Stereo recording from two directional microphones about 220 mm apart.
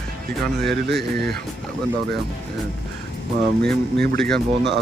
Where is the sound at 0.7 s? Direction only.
50° right (ahead or behind).